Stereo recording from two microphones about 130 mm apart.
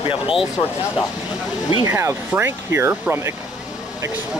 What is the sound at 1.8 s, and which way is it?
Speech, 20° right (ahead or behind).